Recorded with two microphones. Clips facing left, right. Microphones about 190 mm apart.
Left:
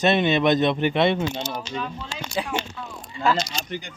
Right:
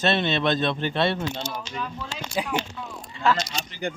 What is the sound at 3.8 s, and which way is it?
Speech, 55° right (ahead or behind).